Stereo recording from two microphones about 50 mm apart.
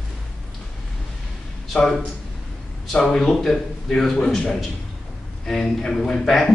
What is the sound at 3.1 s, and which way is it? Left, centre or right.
A man's voice, centre.